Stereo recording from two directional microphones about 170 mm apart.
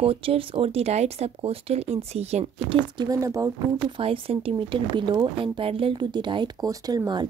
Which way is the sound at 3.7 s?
30° right (ahead or behind).